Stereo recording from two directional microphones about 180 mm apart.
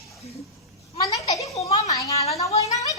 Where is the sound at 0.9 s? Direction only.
20° left (ahead or behind).